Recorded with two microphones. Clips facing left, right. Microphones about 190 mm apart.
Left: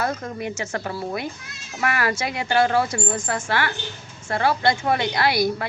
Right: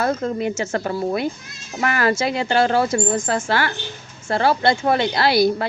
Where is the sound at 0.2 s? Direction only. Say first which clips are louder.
Right 7 dB; 25° right (ahead or behind).